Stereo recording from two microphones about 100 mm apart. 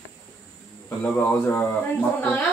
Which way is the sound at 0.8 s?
15° left (ahead or behind).